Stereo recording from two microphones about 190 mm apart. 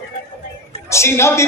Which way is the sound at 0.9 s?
15° left (ahead or behind).